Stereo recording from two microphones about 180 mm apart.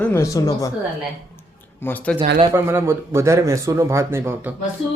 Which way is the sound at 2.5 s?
15° right (ahead or behind).